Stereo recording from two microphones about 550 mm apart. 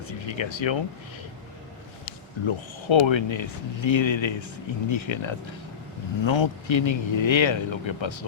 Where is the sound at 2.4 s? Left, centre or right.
Left.